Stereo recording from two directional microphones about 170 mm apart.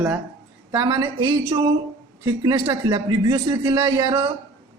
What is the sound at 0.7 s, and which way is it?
A man's voice, 20° right (ahead or behind).